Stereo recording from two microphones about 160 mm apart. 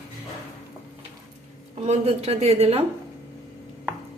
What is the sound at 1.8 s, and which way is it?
A woman's voice, 40° right (ahead or behind).